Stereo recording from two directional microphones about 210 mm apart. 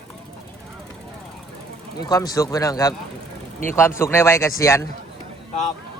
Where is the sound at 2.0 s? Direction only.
20° left (ahead or behind).